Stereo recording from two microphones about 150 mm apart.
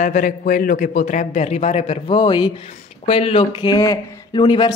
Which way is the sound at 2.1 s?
30° left (ahead or behind).